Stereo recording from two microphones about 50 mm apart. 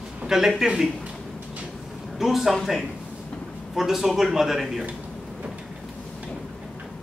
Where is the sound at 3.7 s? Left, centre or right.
Centre.